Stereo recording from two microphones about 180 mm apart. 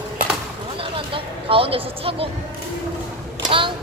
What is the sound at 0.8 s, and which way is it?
Speech, 30° right (ahead or behind).